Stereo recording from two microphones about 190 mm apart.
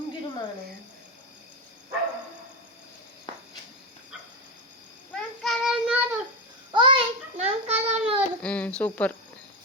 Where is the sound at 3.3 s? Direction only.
25° left (ahead or behind).